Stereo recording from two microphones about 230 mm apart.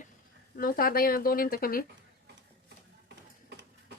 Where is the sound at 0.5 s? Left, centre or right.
Left.